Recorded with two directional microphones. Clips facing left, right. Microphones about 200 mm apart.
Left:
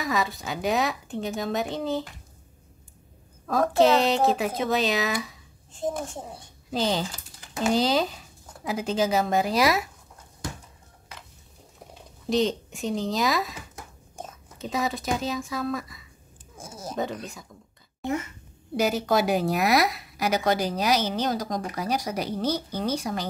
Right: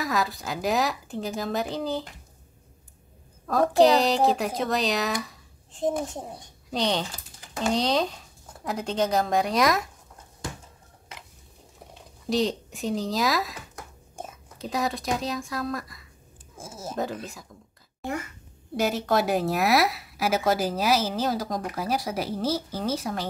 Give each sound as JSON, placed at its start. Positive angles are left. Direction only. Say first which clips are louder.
{"t": 0.0, "sound": "a woman's voice", "louder": "even", "side_deg": 0}
{"t": 3.4, "sound": "a woman's voice", "louder": "right 1 dB", "side_deg": 0}
{"t": 5.7, "sound": "speech", "louder": "right 3 dB", "side_deg": -20}
{"t": 6.3, "sound": "a woman's voice", "louder": "left 1 dB", "side_deg": 0}
{"t": 11.9, "sound": "speech", "louder": "left 1 dB", "side_deg": 0}
{"t": 14.6, "sound": "a woman's voice", "louder": "even", "side_deg": 0}
{"t": 18.8, "sound": "a woman's voice", "louder": "left 1 dB", "side_deg": 0}